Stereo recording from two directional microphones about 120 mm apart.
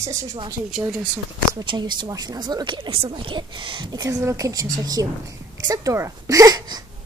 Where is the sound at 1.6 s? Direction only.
40° right (ahead or behind).